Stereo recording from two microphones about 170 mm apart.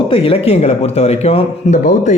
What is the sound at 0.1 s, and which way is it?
Speech, 35° left (ahead or behind).